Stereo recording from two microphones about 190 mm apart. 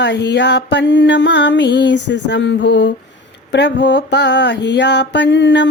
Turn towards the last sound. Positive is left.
turn(degrees=70)  # may be behind; listen again after turning